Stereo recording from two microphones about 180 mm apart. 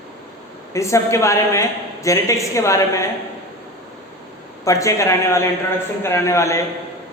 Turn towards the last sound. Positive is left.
turn(degrees=15)  # may be behind; listen again after turning